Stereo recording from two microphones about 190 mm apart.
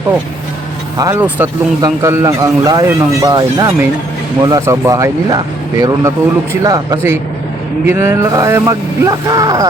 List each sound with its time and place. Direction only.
0.9 s speech: 15° right (ahead or behind)